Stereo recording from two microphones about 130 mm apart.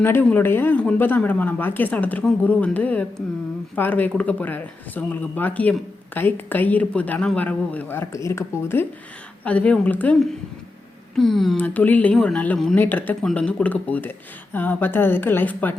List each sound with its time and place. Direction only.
0.0 s speech: 15° left (ahead or behind)
11.1 s speech: centre (ahead or behind)
11.5 s speech: 15° left (ahead or behind)